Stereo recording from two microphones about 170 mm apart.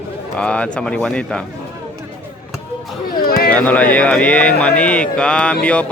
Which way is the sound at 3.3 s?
65° left (ahead or behind).